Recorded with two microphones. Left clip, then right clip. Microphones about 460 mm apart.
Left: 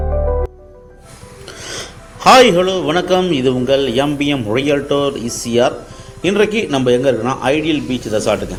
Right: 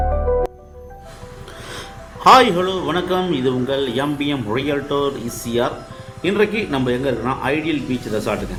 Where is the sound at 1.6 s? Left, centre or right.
Right.